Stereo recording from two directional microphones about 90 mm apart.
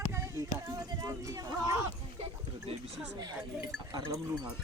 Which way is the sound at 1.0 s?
45° right (ahead or behind).